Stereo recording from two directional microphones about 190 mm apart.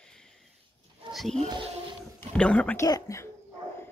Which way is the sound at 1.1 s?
Centre (ahead or behind).